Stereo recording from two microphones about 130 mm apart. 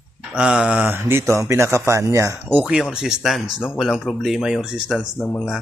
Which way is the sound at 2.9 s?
5° right (ahead or behind).